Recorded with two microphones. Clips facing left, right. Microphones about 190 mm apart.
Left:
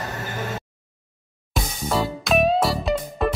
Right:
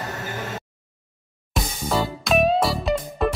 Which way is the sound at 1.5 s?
Centre (ahead or behind).